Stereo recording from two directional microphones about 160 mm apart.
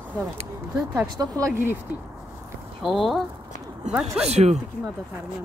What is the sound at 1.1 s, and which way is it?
Speech, 25° right (ahead or behind).